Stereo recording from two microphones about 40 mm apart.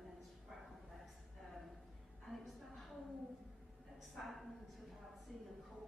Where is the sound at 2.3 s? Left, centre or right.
Centre.